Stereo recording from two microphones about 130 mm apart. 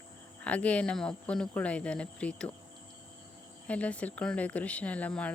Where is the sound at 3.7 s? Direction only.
10° left (ahead or behind).